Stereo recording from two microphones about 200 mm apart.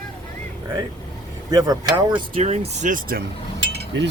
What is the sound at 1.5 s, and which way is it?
Speech, 20° right (ahead or behind).